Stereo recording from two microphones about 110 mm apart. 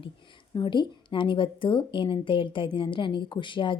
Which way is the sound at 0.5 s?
45° left (ahead or behind).